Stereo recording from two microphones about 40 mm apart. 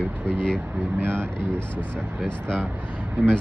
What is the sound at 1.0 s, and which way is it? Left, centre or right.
Speech, right.